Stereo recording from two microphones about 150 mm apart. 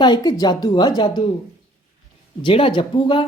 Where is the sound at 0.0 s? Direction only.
25° left (ahead or behind).